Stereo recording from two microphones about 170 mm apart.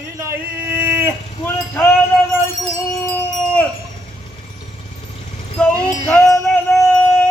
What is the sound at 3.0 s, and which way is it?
Wind chime, 10° left (ahead or behind).